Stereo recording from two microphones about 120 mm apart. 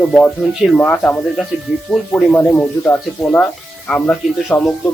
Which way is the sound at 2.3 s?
5° left (ahead or behind).